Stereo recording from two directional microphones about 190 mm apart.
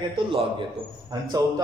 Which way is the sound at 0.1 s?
25° right (ahead or behind).